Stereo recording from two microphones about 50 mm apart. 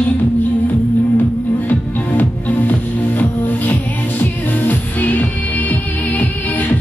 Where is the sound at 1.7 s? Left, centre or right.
Left.